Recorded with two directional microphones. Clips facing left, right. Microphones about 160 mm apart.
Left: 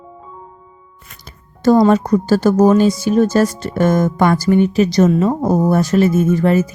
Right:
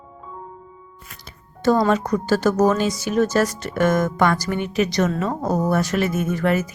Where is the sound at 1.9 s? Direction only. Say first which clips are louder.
Left 6 dB; 35° left (ahead or behind).